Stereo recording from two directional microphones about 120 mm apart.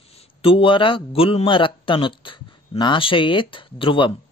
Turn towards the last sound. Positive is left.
turn(degrees=45)  # may be behind; listen again after turning